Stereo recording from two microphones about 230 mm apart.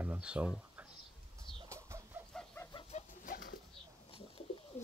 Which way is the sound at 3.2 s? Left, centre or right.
Left.